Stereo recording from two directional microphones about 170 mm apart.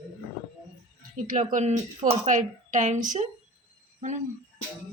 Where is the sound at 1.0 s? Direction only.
50° right (ahead or behind).